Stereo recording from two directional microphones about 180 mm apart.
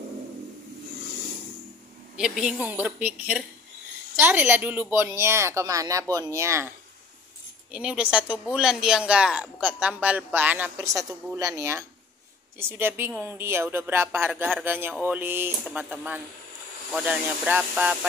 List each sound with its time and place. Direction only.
2.1 s speech: 5° right (ahead or behind)
7.7 s speech: 5° right (ahead or behind)